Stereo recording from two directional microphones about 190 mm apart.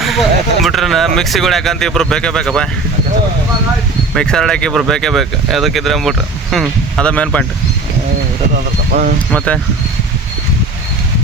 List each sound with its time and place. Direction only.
0.0 s speech: centre (ahead or behind)
4.1 s speech: 5° left (ahead or behind)
8.9 s speech: 50° right (ahead or behind)
9.3 s speech: 5° left (ahead or behind)